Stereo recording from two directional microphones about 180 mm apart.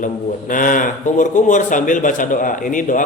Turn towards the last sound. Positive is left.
turn(degrees=45)  # may be behind; listen again after turning